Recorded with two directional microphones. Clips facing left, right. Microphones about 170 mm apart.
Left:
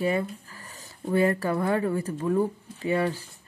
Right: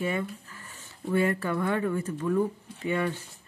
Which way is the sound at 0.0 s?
35° left (ahead or behind).